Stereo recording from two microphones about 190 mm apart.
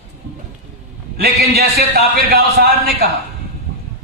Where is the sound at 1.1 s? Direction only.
55° right (ahead or behind).